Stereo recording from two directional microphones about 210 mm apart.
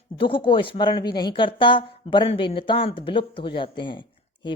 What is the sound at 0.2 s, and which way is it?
Speech, 25° left (ahead or behind).